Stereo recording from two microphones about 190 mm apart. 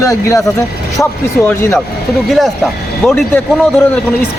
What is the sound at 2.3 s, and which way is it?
Speech, centre (ahead or behind).